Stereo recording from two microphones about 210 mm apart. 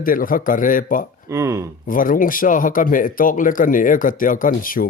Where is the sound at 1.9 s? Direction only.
40° left (ahead or behind).